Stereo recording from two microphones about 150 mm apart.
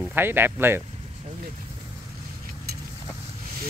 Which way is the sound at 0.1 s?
15° right (ahead or behind).